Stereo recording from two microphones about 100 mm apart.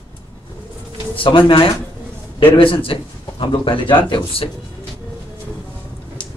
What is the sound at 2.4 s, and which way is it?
Speech, 60° left (ahead or behind).